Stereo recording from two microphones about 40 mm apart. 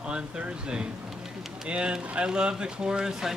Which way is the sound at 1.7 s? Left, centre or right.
Right.